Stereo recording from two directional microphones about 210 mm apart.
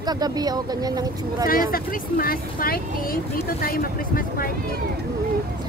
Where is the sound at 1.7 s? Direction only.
45° left (ahead or behind).